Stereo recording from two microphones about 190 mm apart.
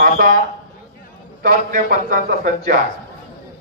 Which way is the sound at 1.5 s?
50° right (ahead or behind).